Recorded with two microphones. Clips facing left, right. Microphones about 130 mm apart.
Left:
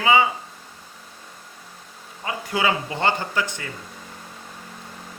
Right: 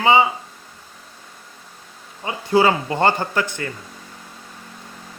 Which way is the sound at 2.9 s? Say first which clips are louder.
Right 5 dB; 50° right (ahead or behind).